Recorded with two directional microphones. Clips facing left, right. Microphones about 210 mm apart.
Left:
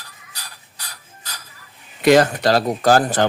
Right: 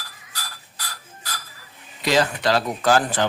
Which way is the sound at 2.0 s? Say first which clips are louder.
Left 7 dB; 55° left (ahead or behind).